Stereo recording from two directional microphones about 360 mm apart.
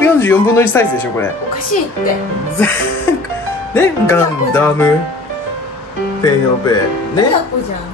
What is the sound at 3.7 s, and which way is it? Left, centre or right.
Speech, centre.